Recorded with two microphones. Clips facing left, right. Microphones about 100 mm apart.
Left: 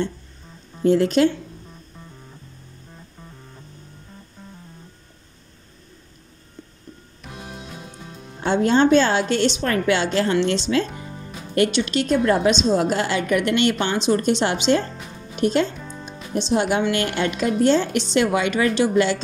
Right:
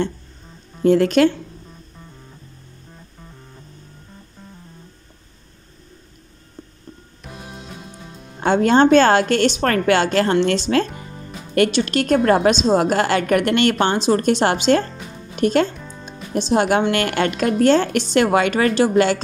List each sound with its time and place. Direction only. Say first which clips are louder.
0.8 s a woman's voice: right 2 dB; 65° right (ahead or behind)
7.2 s music: right 1 dB; centre (ahead or behind)
8.4 s a woman's voice: right 3 dB; 60° right (ahead or behind)
11.7 s a woman's voice: right 3 dB; 50° right (ahead or behind)
15.7 s music: left 1 dB; centre (ahead or behind)
16.1 s a woman's voice: right 2 dB; 50° right (ahead or behind)